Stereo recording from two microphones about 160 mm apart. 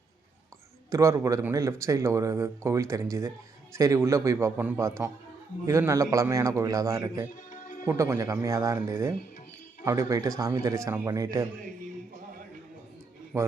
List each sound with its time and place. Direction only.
0.9 s speech: 20° right (ahead or behind)
7.5 s music: 50° left (ahead or behind)
7.9 s speech: 15° right (ahead or behind)
13.3 s speech: 20° right (ahead or behind)